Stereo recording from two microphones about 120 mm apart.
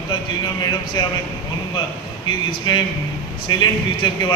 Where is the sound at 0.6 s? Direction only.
40° left (ahead or behind).